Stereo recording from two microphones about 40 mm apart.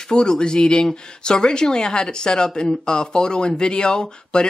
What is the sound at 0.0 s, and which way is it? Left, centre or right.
Speech, centre.